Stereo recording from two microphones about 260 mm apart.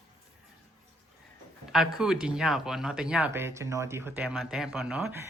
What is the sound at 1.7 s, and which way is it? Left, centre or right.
Speech, centre.